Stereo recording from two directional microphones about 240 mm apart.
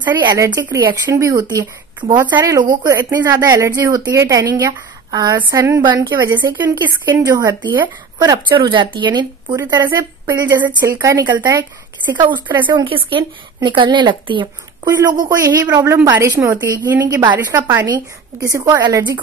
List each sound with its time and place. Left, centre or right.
0.0 s speech: centre